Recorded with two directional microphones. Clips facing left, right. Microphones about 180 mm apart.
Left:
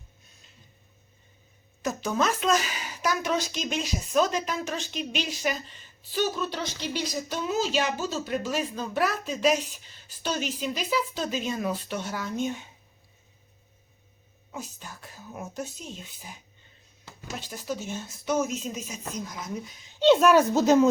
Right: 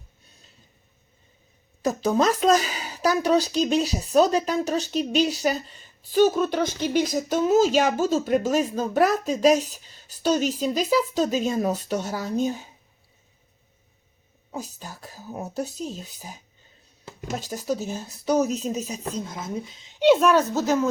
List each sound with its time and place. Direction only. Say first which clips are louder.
1.8 s a woman's voice: right 6 dB; 35° right (ahead or behind)
14.5 s a woman's voice: right 4 dB; 40° right (ahead or behind); by 20.1 s 15° right (ahead or behind)
20.1 s speech: even; 5° left (ahead or behind)